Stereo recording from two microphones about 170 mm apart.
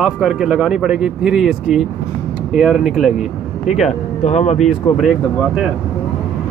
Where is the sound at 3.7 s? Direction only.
40° left (ahead or behind).